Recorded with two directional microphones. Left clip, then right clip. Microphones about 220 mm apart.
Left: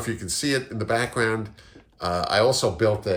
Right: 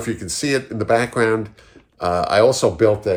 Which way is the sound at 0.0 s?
20° right (ahead or behind).